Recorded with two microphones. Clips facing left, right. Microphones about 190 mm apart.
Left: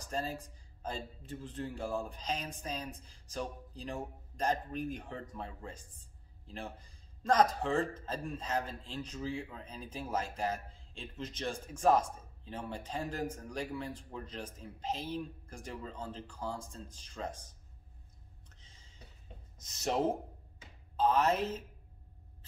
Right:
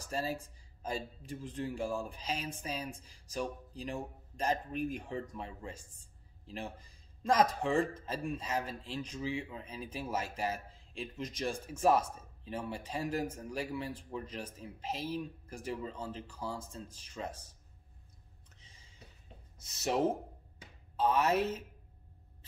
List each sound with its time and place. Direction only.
0.0 s speech: 10° right (ahead or behind)
19.6 s speech: 5° right (ahead or behind)